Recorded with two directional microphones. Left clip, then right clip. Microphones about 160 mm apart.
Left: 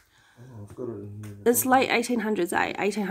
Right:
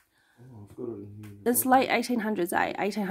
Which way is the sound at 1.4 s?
10° right (ahead or behind).